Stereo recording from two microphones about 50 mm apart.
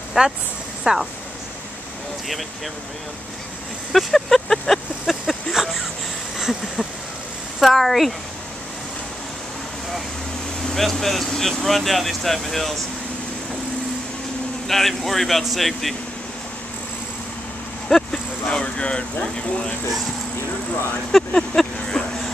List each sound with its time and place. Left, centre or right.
0.2 s speech: centre
3.9 s speech: centre
5.5 s a sound: centre
7.6 s speech: centre
10.6 s speech: centre
14.7 s speech: centre
17.8 s a sound: centre
18.5 s speech: centre
21.3 s speech: centre